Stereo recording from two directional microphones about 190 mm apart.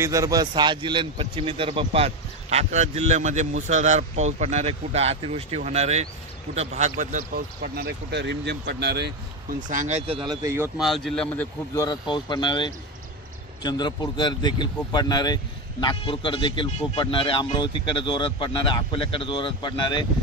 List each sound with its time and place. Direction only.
0.0 s a man's voice: 15° right (ahead or behind); by 9.6 s 60° right (ahead or behind)
9.7 s a man's voice: 40° right (ahead or behind); by 10.7 s 15° right (ahead or behind)
10.8 s speech: centre (ahead or behind)
11.7 s speech: 20° left (ahead or behind)